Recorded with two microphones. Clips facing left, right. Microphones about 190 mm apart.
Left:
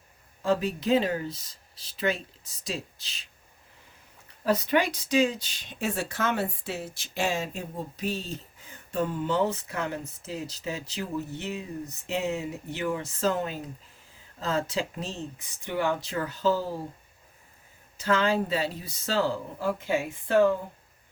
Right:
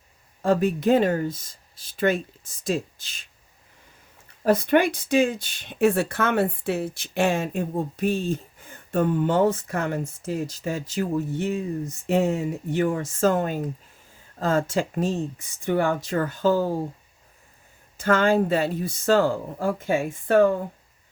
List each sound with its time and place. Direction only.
0.4 s speech: 50° right (ahead or behind)
4.4 s speech: 55° right (ahead or behind)
17.9 s speech: 50° right (ahead or behind)